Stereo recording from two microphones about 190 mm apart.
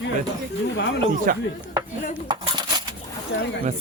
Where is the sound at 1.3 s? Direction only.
45° right (ahead or behind).